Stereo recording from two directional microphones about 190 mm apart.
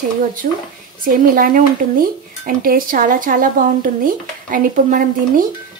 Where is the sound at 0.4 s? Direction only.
45° right (ahead or behind).